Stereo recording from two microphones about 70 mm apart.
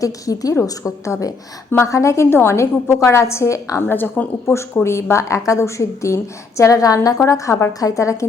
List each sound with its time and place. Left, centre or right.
0.0 s a woman's voice: left
3.8 s a woman's voice: left
4.4 s a woman's voice: left